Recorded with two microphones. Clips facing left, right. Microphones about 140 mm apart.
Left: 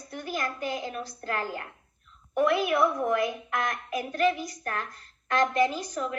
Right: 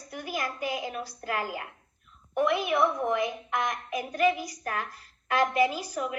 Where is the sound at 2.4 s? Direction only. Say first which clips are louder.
Left 2 dB; centre (ahead or behind).